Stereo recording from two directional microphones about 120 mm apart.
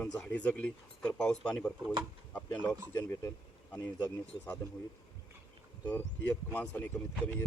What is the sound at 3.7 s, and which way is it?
Speech, 15° left (ahead or behind).